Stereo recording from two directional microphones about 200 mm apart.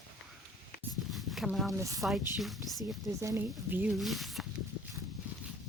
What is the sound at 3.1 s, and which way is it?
Speech, 15° right (ahead or behind).